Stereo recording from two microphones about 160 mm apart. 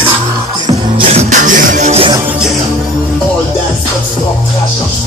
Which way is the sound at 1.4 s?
55° right (ahead or behind).